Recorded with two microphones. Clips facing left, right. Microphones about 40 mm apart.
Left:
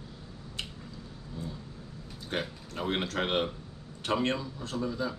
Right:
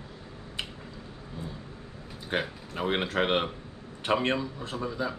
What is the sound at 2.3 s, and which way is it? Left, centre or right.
A man's voice, centre.